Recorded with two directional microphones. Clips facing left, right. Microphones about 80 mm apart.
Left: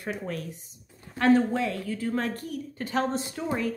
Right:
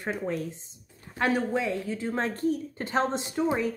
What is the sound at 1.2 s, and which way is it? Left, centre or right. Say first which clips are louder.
A woman's voice: left 4 dB; centre.